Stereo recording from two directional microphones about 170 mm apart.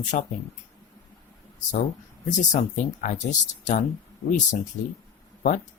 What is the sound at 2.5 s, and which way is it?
Speech, 45° left (ahead or behind).